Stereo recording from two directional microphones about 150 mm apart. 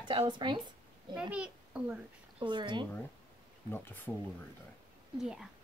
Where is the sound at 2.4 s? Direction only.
30° right (ahead or behind).